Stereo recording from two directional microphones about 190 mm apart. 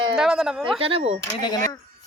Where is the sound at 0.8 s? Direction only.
30° right (ahead or behind).